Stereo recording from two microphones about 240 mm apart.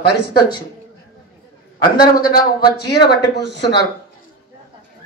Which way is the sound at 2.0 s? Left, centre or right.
Centre.